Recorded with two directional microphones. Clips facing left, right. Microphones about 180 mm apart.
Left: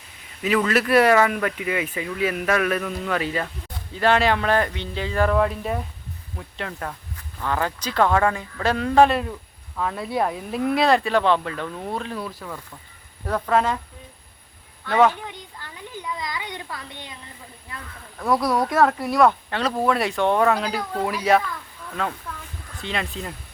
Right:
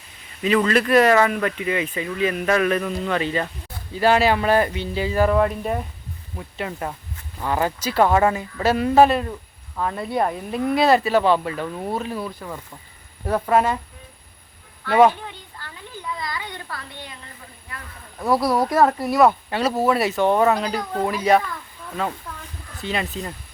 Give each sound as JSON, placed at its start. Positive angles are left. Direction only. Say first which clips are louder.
{"t": 0.4, "sound": "speech", "louder": "right 2 dB", "side_deg": 5}
{"t": 3.9, "sound": "speech", "louder": "right 2 dB", "side_deg": -5}
{"t": 14.8, "sound": "speech", "louder": "right 3 dB", "side_deg": -10}
{"t": 15.3, "sound": "a sound", "louder": "left 1 dB", "side_deg": 15}
{"t": 18.3, "sound": "speech", "louder": "right 2 dB", "side_deg": -5}